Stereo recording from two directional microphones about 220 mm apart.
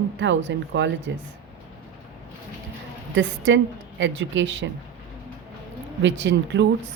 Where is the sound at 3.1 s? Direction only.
60° right (ahead or behind).